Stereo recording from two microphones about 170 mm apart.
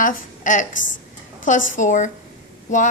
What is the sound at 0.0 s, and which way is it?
A woman's voice, 55° left (ahead or behind).